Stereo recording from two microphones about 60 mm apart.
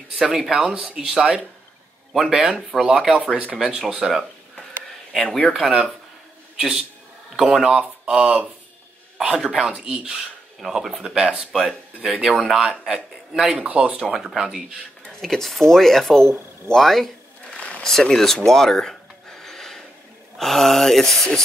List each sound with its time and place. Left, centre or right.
0.1 s speech: centre
5.1 s speech: centre
5.5 s a man's voice: centre
10.7 s speech: centre
13.7 s speech: right
14.1 s speech: centre
15.1 s speech: centre
16.7 s a sound: centre
17.6 s a sound: centre
17.8 s a sound: centre
20.3 s speech: centre